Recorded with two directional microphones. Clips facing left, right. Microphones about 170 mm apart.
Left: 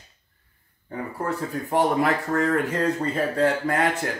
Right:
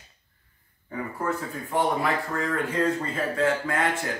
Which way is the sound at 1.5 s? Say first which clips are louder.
Left 5 dB; 40° left (ahead or behind).